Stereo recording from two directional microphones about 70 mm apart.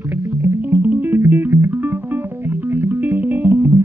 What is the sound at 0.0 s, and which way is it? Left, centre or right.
Music, right.